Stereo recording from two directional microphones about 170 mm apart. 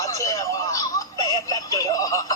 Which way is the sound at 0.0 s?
20° left (ahead or behind).